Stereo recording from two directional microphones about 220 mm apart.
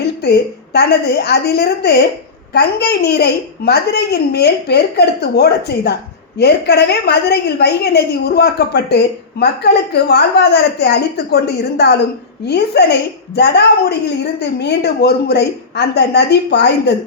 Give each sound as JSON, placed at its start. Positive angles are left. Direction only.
{"t": 0.2, "sound": "a woman's voice", "side_deg": 50}